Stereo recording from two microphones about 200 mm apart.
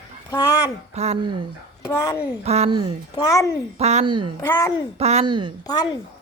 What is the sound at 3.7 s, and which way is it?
Speech, 35° right (ahead or behind).